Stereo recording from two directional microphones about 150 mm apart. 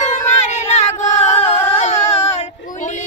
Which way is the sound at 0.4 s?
50° left (ahead or behind).